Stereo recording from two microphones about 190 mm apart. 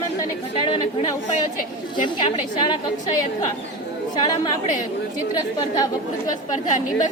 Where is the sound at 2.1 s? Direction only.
25° left (ahead or behind).